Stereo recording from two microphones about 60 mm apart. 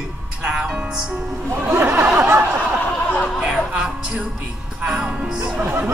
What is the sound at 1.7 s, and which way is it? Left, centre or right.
Speech, right.